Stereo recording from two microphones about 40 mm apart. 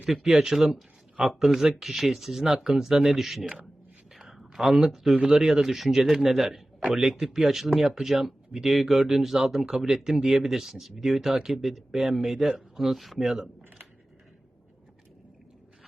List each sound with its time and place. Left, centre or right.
0.3 s a man's voice: centre
4.1 s a sound: centre
5.2 s a man's voice: centre